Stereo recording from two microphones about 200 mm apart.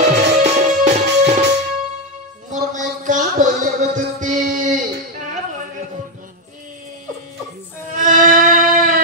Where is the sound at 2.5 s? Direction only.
40° right (ahead or behind).